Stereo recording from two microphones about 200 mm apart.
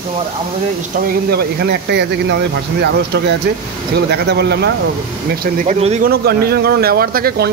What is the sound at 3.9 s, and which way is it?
Speech, 55° right (ahead or behind).